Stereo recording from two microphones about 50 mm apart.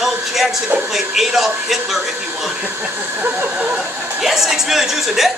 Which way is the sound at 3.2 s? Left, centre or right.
Right.